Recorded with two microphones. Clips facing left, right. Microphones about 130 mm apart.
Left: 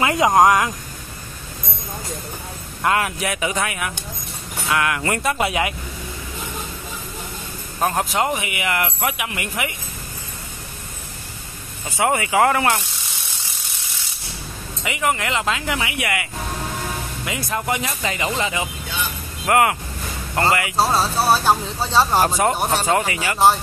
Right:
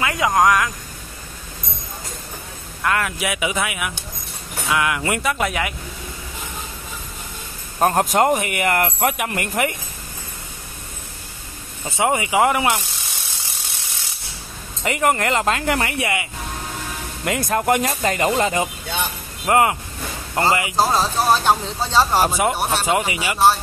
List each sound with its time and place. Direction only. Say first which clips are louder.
0.0 s speech: left 3 dB; 25° left (ahead or behind)
2.8 s speech: left 2 dB; 25° left (ahead or behind)
3.2 s speech: even; 10° right (ahead or behind)
5.2 s speech: left 2 dB; centre (ahead or behind)
5.5 s speech: left 2 dB; 20° left (ahead or behind)
7.8 s speech: right 4 dB; 45° right (ahead or behind)
12.0 s speech: even; 20° right (ahead or behind)
14.8 s speech: right 3 dB; 45° right (ahead or behind)
16.0 s speech: right 1 dB; 25° right (ahead or behind)
17.2 s speech: right 7 dB; 50° right (ahead or behind)
19.4 s speech: even; 25° right (ahead or behind)
20.7 s speech: even; centre (ahead or behind)
22.2 s speech: left 1 dB; 10° right (ahead or behind)